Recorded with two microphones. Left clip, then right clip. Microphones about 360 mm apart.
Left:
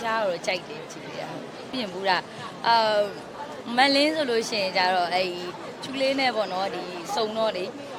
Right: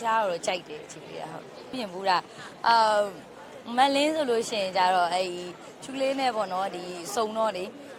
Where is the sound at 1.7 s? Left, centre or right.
Centre.